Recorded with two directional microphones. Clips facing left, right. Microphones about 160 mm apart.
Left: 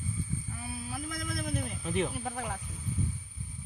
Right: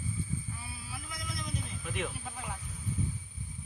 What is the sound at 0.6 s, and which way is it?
Speech, 50° left (ahead or behind).